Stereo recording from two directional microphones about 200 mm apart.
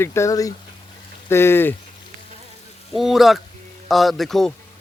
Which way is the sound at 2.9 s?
Centre (ahead or behind).